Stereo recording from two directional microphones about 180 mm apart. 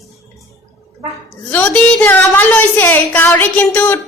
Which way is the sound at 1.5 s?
10° left (ahead or behind).